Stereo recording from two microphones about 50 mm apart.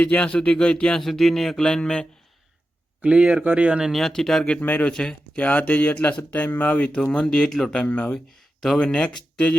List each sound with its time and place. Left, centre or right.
0.0 s speech: left
1.0 s a sound: centre
3.0 s speech: right
3.9 s a sound: centre
4.6 s speech: left
4.9 s a sound: centre
5.4 s speech: left
6.9 s speech: left
7.8 s speech: left
8.8 s speech: left